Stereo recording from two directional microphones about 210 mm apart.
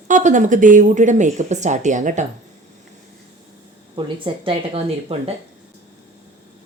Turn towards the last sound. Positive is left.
turn(degrees=-30)  # may be behind; listen again after turning